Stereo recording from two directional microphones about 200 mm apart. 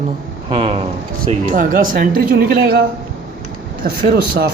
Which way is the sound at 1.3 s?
40° right (ahead or behind).